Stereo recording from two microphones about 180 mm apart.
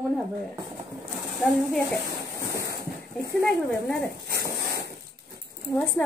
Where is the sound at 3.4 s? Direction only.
5° left (ahead or behind).